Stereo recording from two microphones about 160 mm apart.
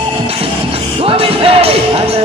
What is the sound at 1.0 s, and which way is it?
Music, 35° right (ahead or behind).